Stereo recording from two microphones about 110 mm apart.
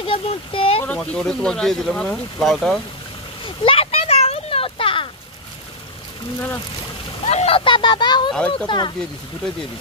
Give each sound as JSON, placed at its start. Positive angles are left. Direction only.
{"t": 0.0, "sound": "a sound", "side_deg": 55}
{"t": 0.8, "sound": "speech", "side_deg": 10}
{"t": 3.4, "sound": "a sound", "side_deg": 55}
{"t": 7.2, "sound": "speech", "side_deg": 75}
{"t": 8.3, "sound": "speech", "side_deg": 10}
{"t": 8.6, "sound": "speech", "side_deg": 45}